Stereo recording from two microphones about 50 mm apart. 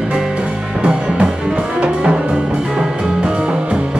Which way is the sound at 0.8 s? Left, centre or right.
Right.